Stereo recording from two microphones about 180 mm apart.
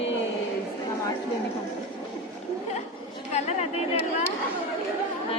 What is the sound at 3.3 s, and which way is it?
Speech, 35° left (ahead or behind).